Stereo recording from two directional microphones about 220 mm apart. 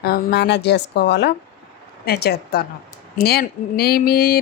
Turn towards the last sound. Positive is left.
turn(degrees=45)  # may be behind; listen again after turning